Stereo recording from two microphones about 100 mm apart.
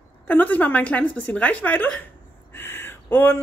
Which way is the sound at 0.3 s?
15° left (ahead or behind).